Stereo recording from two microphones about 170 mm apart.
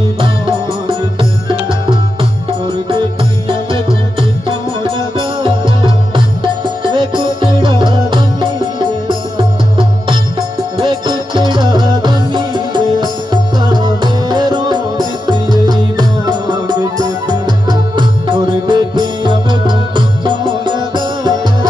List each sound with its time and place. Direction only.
0.2 s music: 30° right (ahead or behind)
3.4 s music: 30° right (ahead or behind)